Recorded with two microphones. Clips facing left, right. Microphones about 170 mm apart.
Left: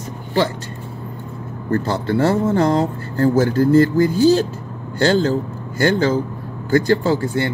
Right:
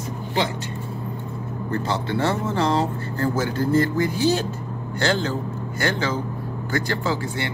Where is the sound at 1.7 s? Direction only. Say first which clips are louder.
Left 6 dB; 45° left (ahead or behind).